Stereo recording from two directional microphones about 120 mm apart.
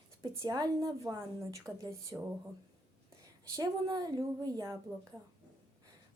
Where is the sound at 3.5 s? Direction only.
35° right (ahead or behind).